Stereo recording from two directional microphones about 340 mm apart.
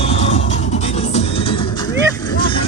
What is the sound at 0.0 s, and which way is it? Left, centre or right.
Music, centre.